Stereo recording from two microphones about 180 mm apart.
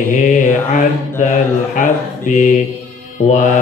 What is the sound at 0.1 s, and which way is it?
Mantra, 45° left (ahead or behind).